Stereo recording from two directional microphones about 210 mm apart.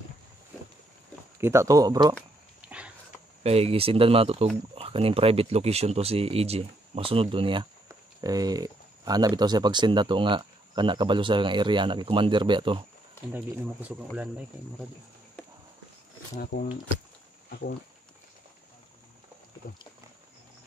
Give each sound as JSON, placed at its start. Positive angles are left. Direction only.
{"t": 1.4, "sound": "speech", "side_deg": -15}
{"t": 2.6, "sound": "a sound", "side_deg": -5}
{"t": 3.4, "sound": "speech", "side_deg": -30}
{"t": 13.3, "sound": "speech", "side_deg": -5}
{"t": 17.5, "sound": "speech", "side_deg": 50}
{"t": 19.6, "sound": "wild animals", "side_deg": 40}